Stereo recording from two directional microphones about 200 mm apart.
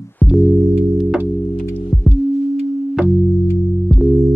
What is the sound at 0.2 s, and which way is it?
Music, centre (ahead or behind).